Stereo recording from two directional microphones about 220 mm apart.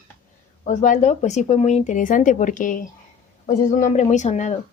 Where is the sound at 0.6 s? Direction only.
35° left (ahead or behind).